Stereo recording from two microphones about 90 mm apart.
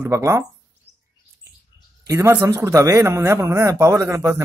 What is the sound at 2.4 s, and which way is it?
Speech, 35° right (ahead or behind).